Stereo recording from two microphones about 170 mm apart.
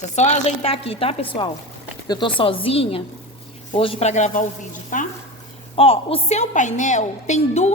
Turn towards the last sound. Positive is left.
turn(degrees=40)  # may be behind; listen again after turning